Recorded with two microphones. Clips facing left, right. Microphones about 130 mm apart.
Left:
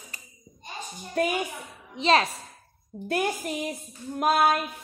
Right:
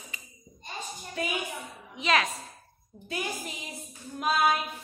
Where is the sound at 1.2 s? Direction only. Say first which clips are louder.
Left 8 dB; 50° left (ahead or behind).